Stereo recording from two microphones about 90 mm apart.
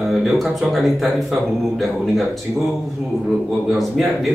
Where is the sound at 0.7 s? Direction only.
Centre (ahead or behind).